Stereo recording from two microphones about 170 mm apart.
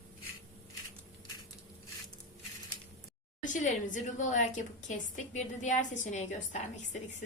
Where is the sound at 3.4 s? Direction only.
50° left (ahead or behind).